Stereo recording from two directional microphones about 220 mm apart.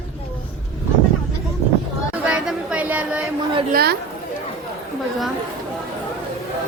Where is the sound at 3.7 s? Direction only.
45° right (ahead or behind).